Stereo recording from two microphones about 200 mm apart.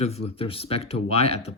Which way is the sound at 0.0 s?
30° left (ahead or behind).